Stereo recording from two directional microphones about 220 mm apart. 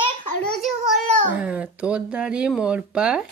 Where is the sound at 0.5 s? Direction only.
Centre (ahead or behind).